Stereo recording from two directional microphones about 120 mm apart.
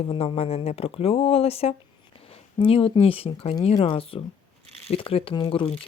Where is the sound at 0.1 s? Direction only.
55° left (ahead or behind).